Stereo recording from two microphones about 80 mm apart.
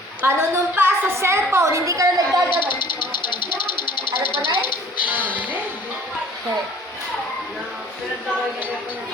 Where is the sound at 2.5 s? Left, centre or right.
Left.